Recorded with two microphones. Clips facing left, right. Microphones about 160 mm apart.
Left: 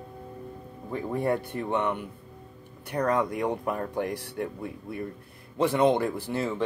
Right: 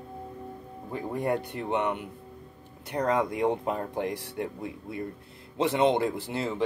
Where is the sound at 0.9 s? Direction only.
15° right (ahead or behind).